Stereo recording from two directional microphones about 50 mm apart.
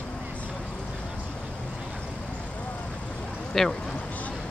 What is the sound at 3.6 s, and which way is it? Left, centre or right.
Speech, centre.